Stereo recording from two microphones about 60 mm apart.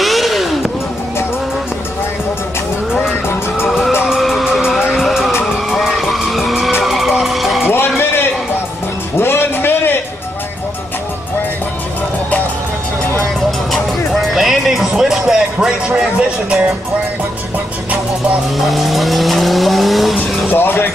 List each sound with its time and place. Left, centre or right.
0.0 s vehicle: centre
3.6 s vehicle: centre
5.4 s vehicle: centre
7.6 s music: left
9.2 s music: left
13.7 s music: centre
18.7 s vehicle: centre
20.2 s vehicle: left